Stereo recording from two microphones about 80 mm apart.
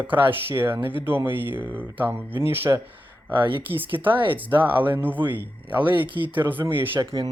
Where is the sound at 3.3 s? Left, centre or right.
Right.